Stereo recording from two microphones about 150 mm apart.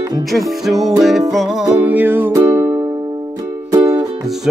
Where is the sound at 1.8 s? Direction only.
10° right (ahead or behind).